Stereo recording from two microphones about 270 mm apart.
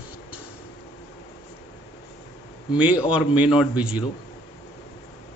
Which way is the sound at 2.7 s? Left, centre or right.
Centre.